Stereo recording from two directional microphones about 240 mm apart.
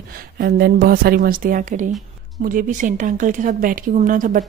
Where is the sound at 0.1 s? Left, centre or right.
Right.